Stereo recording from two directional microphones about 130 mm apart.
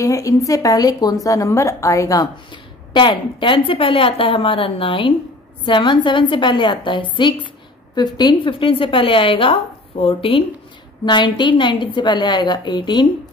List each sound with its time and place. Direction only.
0.0 s a woman's voice: 25° left (ahead or behind)
2.5 s a woman's voice: 35° left (ahead or behind)